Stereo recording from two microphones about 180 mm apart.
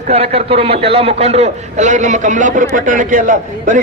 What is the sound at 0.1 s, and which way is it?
A man's voice, 35° right (ahead or behind).